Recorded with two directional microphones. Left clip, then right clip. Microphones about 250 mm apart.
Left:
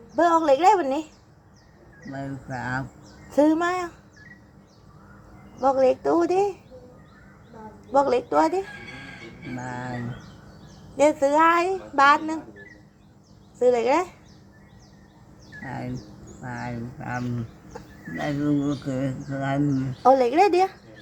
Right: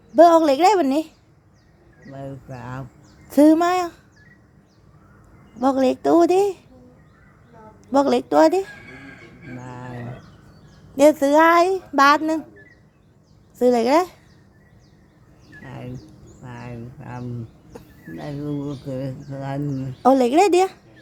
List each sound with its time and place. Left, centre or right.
0.2 s a woman's voice: right
2.5 s speech: centre
3.2 s a woman's voice: right
5.5 s a woman's voice: right
7.9 s a woman's voice: right
10.9 s a woman's voice: right
13.6 s a woman's voice: right
16.4 s speech: centre
20.0 s a woman's voice: right